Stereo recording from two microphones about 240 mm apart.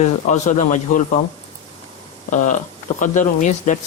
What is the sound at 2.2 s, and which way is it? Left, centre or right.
Speech, left.